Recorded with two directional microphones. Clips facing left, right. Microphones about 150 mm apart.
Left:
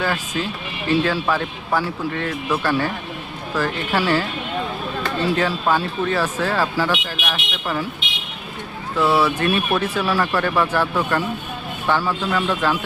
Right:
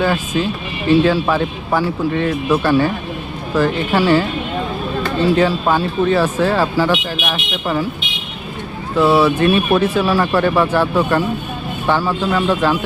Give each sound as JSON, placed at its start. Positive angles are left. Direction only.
{"t": 0.0, "sound": "speech", "side_deg": -20}
{"t": 5.4, "sound": "speech", "side_deg": -20}
{"t": 9.0, "sound": "speech", "side_deg": -25}